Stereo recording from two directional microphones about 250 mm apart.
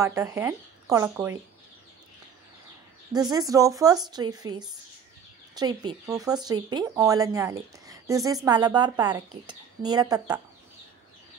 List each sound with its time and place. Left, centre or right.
0.0 s speech: centre
3.2 s speech: centre